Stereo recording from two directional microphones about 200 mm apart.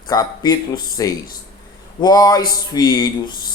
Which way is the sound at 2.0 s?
20° left (ahead or behind).